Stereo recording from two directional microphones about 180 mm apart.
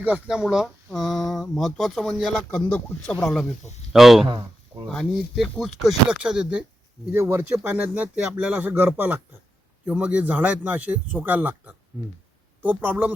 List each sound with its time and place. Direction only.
0.0 s speech: 5° right (ahead or behind)
4.3 s speech: 25° right (ahead or behind)
4.9 s speech: centre (ahead or behind)